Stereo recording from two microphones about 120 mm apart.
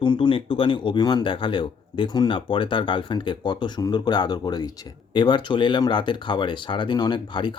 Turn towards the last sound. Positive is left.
turn(degrees=40)  # may be behind; listen again after turning